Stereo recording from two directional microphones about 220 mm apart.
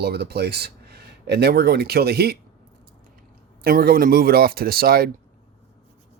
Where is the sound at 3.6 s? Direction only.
45° right (ahead or behind).